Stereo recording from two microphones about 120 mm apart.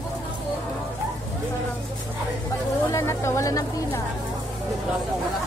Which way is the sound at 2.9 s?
25° left (ahead or behind).